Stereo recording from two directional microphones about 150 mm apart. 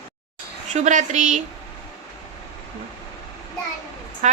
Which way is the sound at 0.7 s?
55° right (ahead or behind).